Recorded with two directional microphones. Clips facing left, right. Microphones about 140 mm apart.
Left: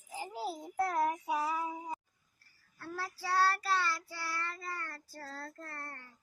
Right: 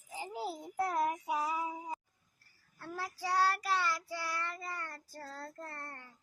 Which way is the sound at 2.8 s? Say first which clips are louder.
Right 1 dB; 15° right (ahead or behind).